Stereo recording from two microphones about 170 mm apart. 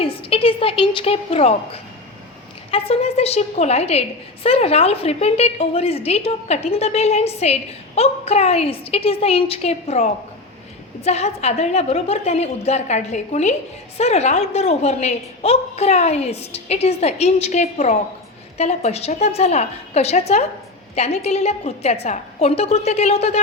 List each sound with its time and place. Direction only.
0.0 s a woman's voice: 35° left (ahead or behind)